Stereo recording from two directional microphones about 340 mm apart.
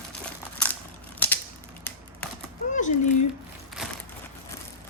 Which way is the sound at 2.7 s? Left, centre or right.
Left.